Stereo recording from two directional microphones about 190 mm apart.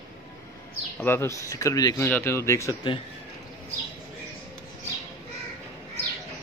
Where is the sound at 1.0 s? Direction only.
10° left (ahead or behind).